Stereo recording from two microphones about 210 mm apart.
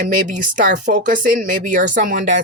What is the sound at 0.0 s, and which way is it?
Speech, 40° right (ahead or behind).